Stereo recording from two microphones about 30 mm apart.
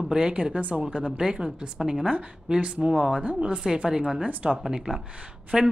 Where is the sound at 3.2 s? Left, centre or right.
Right.